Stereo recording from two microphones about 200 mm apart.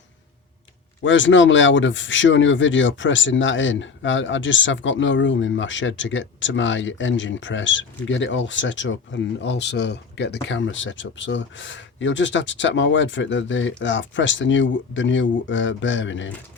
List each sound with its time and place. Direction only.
1.0 s speech: 70° left (ahead or behind)